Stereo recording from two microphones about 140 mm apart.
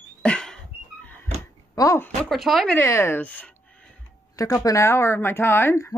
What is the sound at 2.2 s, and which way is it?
Speech, centre (ahead or behind).